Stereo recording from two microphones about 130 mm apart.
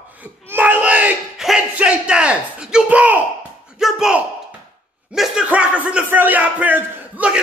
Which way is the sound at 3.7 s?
5° right (ahead or behind).